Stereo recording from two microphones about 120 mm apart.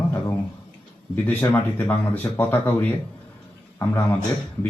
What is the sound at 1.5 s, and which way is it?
Speech, 15° left (ahead or behind).